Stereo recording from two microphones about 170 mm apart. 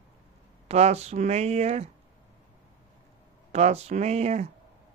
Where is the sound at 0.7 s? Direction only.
40° right (ahead or behind).